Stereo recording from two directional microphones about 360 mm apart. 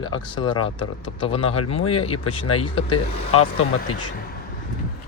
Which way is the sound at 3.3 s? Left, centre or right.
Left.